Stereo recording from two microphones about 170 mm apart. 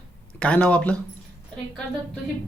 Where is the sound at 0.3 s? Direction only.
10° left (ahead or behind).